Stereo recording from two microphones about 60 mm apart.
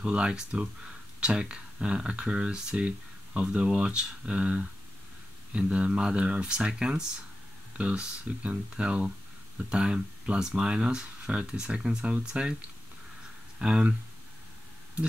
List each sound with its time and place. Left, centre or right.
0.0 s speech: centre
13.6 s speech: centre